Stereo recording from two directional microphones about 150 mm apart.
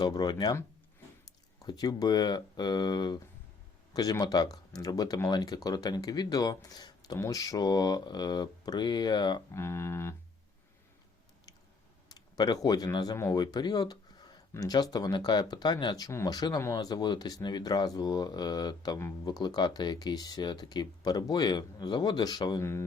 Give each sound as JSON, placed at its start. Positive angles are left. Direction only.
{"t": 0.0, "sound": "speech", "side_deg": 30}
{"t": 1.5, "sound": "speech", "side_deg": 25}
{"t": 9.5, "sound": "speech", "side_deg": 15}
{"t": 12.0, "sound": "speech", "side_deg": 25}